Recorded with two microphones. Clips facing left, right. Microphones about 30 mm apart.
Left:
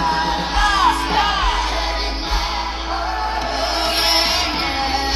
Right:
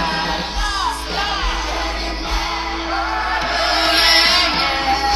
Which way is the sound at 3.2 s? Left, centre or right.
Right.